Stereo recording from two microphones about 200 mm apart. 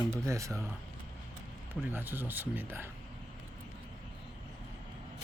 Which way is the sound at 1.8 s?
10° right (ahead or behind).